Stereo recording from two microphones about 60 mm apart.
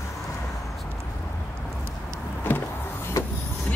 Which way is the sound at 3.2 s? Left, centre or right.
Left.